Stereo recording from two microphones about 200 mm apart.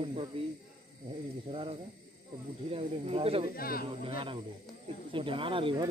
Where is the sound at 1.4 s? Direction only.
25° right (ahead or behind).